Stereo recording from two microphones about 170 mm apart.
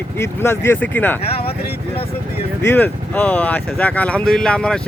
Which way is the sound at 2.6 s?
10° left (ahead or behind).